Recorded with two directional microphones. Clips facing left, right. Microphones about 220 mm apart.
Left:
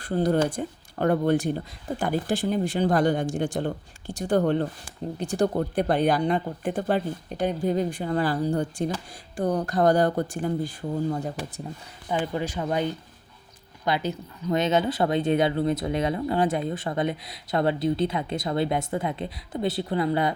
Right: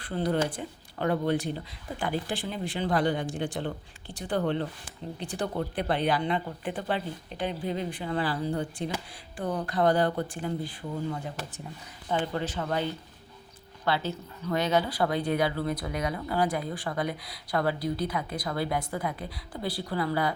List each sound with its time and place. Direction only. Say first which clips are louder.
0.0 s speech: left 5 dB; 45° left (ahead or behind)
12.0 s speech: left 2 dB; 10° left (ahead or behind)